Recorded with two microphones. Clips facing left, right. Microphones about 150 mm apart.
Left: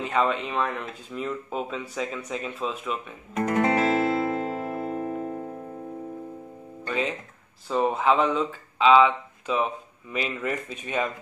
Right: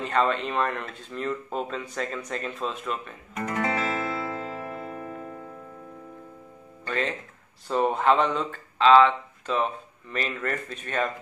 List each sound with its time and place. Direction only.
0.0 s speech: 5° left (ahead or behind)
3.3 s music: 30° left (ahead or behind)
6.9 s speech: 5° left (ahead or behind)